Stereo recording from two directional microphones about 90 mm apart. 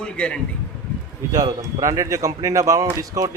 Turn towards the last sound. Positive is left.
turn(degrees=-40)  # may be behind; listen again after turning